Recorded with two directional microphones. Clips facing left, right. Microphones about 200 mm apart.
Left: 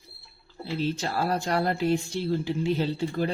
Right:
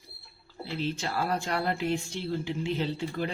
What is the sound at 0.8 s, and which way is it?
Speech, 40° left (ahead or behind).